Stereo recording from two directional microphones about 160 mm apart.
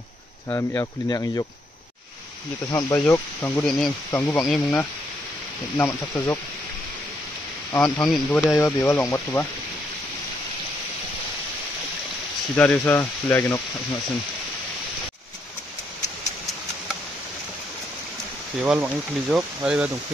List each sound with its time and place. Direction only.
0.5 s speech: 15° left (ahead or behind)
2.7 s speech: 15° left (ahead or behind)
4.4 s speech: 5° left (ahead or behind)
5.8 s speech: 15° left (ahead or behind)
7.7 s speech: 20° left (ahead or behind)
8.1 s speech: centre (ahead or behind)
8.5 s speech: 15° left (ahead or behind)
12.5 s speech: 10° left (ahead or behind)
18.6 s speech: 5° right (ahead or behind)